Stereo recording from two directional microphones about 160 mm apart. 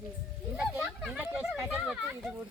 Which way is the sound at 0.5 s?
5° right (ahead or behind).